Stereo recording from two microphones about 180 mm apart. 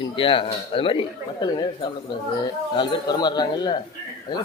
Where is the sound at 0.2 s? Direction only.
30° left (ahead or behind).